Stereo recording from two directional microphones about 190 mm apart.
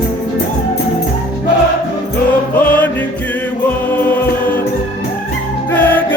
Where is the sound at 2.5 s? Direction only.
10° left (ahead or behind).